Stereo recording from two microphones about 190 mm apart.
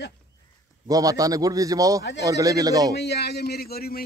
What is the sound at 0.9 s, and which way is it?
Speech, 20° right (ahead or behind).